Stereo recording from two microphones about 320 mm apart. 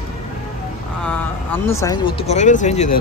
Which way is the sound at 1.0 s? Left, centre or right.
Centre.